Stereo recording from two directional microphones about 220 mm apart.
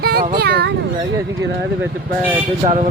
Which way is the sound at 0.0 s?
45° right (ahead or behind).